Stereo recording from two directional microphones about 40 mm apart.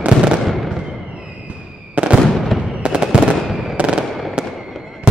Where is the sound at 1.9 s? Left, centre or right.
Right.